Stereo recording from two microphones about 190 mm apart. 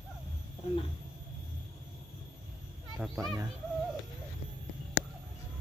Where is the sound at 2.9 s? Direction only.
Centre (ahead or behind).